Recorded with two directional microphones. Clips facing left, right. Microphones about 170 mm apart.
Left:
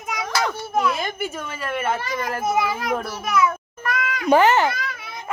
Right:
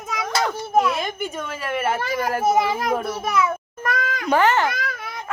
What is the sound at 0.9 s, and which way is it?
A woman's voice, centre (ahead or behind).